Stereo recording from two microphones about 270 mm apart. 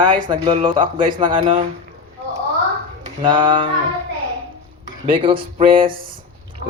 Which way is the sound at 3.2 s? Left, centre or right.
Centre.